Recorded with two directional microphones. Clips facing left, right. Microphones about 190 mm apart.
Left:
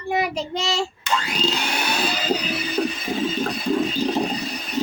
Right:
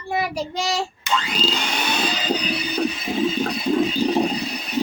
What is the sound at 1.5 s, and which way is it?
Vacuum cleaner, 5° left (ahead or behind).